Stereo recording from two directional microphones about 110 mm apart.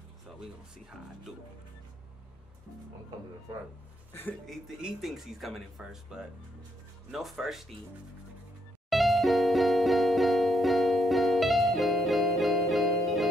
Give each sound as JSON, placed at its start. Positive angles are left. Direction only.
{"t": 4.1, "sound": "speech", "side_deg": 20}
{"t": 4.5, "sound": "speech", "side_deg": 0}
{"t": 8.9, "sound": "music", "side_deg": 0}